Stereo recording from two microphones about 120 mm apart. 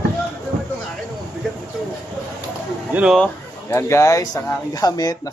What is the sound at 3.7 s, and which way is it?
A man's voice, 25° left (ahead or behind).